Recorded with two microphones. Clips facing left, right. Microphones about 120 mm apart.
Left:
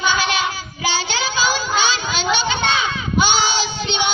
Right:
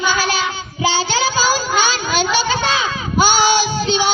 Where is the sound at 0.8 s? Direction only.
30° right (ahead or behind).